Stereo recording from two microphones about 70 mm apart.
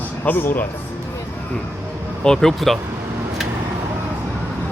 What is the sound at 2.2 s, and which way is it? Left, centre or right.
Speech, centre.